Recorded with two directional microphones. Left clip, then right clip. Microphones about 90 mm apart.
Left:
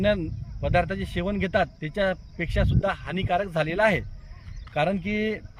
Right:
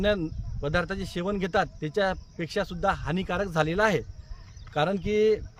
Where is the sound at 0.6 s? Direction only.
55° right (ahead or behind).